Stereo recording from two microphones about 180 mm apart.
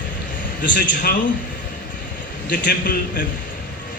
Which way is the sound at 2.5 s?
50° left (ahead or behind).